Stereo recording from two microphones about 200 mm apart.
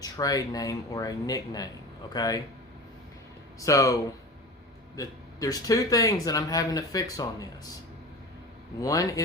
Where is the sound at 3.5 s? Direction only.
15° left (ahead or behind).